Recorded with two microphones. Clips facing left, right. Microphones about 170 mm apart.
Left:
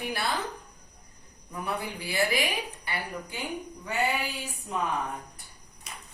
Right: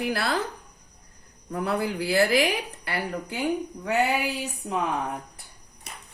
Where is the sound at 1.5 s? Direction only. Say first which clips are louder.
Right 7 dB; 75° right (ahead or behind).